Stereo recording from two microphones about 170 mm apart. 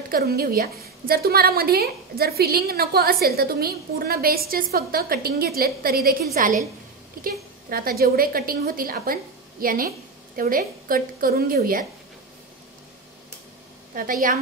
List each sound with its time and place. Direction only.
0.1 s a woman's voice: 60° right (ahead or behind)
13.9 s a woman's voice: 55° right (ahead or behind)